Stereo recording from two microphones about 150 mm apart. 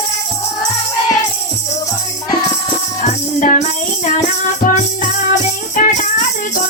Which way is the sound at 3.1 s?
55° left (ahead or behind).